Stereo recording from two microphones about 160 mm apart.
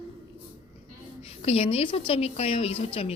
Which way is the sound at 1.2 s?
40° left (ahead or behind).